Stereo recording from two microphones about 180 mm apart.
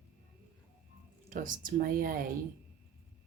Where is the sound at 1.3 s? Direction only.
50° right (ahead or behind).